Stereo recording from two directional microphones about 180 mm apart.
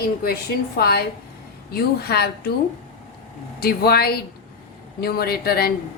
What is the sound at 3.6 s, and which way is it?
Speech, 60° left (ahead or behind).